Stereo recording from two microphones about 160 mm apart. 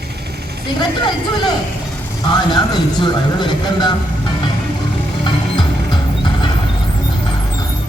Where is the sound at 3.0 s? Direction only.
30° left (ahead or behind).